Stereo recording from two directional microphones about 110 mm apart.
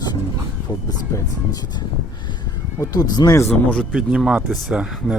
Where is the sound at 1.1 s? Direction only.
35° left (ahead or behind).